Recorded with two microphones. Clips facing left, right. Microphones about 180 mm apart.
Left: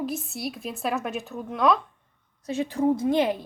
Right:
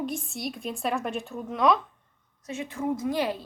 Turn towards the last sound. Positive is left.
turn(degrees=25)  # may be behind; listen again after turning